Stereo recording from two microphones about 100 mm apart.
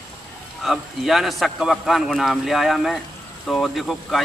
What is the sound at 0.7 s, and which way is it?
A man's voice, centre (ahead or behind).